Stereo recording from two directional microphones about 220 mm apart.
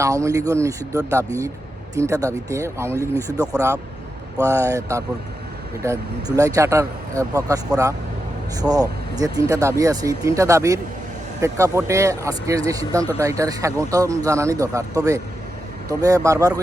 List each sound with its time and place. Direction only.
0.0 s speech: 15° right (ahead or behind)
3.0 s speech: 10° left (ahead or behind)
3.3 s speech: 15° right (ahead or behind)
8.6 s speech: 15° right (ahead or behind)